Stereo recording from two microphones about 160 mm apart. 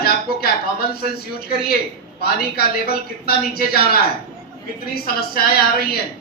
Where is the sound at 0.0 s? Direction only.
75° left (ahead or behind).